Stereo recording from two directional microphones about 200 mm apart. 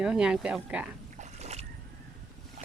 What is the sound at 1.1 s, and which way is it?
Boat, 35° right (ahead or behind).